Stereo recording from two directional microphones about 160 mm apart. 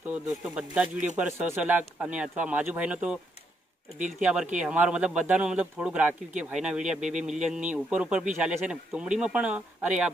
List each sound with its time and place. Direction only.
0.1 s speech: 5° right (ahead or behind)
4.2 s speech: 5° right (ahead or behind)